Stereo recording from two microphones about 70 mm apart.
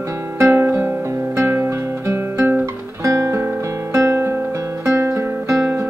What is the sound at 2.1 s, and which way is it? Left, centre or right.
Guitar, right.